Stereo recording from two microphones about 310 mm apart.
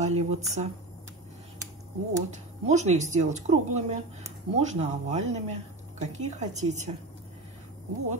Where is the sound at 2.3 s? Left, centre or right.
Right.